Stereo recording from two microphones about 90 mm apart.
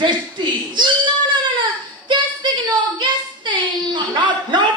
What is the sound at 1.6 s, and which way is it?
Child singing, 55° right (ahead or behind).